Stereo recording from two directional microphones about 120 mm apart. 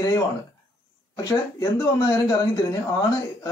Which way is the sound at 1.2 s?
30° left (ahead or behind).